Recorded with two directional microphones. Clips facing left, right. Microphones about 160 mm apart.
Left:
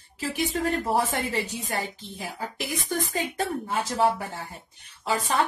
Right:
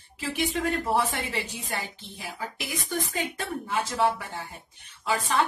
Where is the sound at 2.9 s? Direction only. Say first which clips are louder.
Left 1 dB; 40° left (ahead or behind).